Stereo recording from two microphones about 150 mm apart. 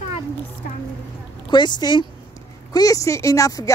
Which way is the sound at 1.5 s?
30° left (ahead or behind).